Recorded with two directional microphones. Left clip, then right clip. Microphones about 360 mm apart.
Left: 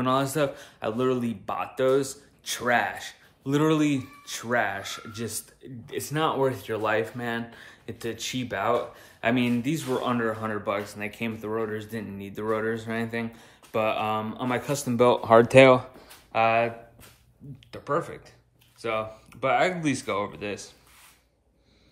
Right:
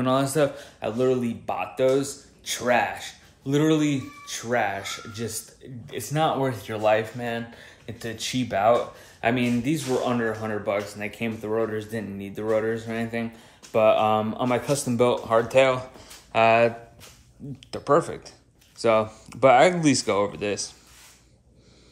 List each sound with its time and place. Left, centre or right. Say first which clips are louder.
0.0 s speech: right 2 dB; centre
15.5 s speech: left 3 dB; left
16.0 s a sound: right 3 dB; centre
17.6 s speech: right 7 dB; centre